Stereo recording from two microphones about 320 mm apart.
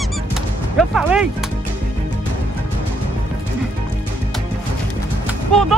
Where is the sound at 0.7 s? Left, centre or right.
Centre.